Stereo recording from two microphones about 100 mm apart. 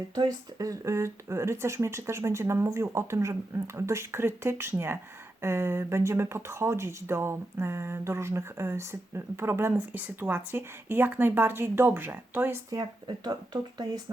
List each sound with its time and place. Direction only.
0.1 s speech: 40° right (ahead or behind); by 12.6 s 20° right (ahead or behind)
12.7 s speech: 45° right (ahead or behind)